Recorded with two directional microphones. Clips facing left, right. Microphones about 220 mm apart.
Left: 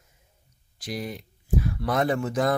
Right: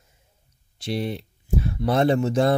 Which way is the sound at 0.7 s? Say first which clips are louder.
Right 6 dB; 30° right (ahead or behind).